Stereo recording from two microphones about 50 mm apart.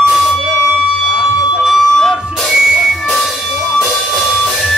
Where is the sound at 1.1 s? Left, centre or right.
Centre.